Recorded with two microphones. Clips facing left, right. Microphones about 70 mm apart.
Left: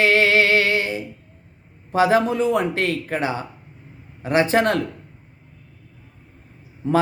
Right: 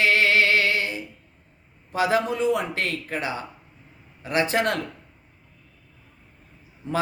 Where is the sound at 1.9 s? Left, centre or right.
Left.